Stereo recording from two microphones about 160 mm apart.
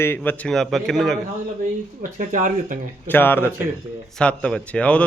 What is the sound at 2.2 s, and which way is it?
Speech, 55° right (ahead or behind).